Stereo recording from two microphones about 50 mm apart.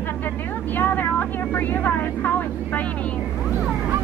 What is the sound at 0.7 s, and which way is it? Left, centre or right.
Speech, left.